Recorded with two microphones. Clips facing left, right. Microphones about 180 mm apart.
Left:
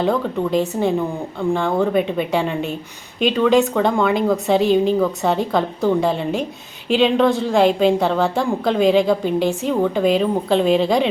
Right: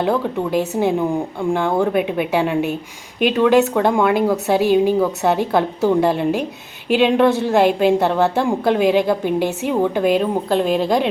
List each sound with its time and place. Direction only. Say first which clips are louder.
0.0 s a woman's voice: even; 5° right (ahead or behind)
6.1 s speech: right 2 dB; 60° right (ahead or behind)
6.8 s a woman's voice: right 1 dB; 5° right (ahead or behind)